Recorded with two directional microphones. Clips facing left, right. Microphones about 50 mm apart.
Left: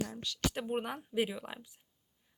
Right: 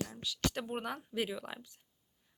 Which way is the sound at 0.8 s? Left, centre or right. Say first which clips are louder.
Left 4 dB; centre.